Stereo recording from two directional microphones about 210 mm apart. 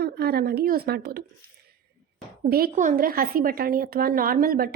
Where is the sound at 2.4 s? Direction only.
45° right (ahead or behind).